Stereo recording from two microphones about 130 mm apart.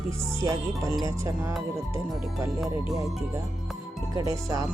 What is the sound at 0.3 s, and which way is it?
Speech, 25° right (ahead or behind).